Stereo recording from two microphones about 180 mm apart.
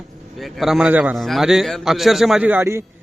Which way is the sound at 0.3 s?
Centre (ahead or behind).